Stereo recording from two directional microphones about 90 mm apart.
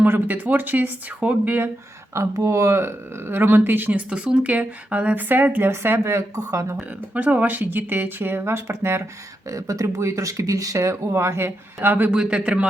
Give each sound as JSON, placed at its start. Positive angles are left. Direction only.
{"t": 0.0, "sound": "speech", "side_deg": -20}
{"t": 2.1, "sound": "speech", "side_deg": -35}
{"t": 6.7, "sound": "speech", "side_deg": -15}
{"t": 9.5, "sound": "speech", "side_deg": -40}
{"t": 12.1, "sound": "a man's voice", "side_deg": -10}